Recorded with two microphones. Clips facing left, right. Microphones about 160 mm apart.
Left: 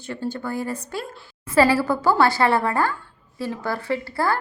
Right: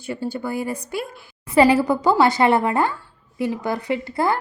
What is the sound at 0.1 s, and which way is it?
A woman's voice, 10° right (ahead or behind).